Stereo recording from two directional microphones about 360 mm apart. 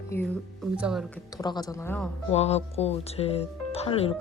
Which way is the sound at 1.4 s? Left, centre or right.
Centre.